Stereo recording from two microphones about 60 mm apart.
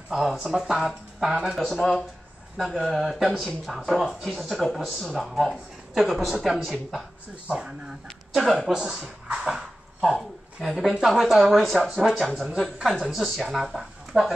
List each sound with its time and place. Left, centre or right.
0.1 s speech: centre
1.5 s speech: centre
7.4 s speech: centre
8.4 s speech: centre
8.8 s speech: centre